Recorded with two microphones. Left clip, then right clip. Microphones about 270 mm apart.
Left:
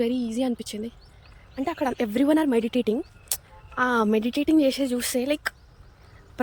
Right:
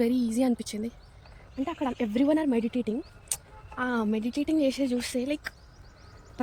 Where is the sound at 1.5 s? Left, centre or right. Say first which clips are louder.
Left 5 dB; centre.